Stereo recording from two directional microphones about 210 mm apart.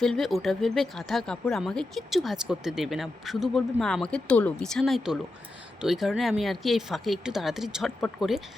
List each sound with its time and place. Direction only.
0.0 s speech: centre (ahead or behind)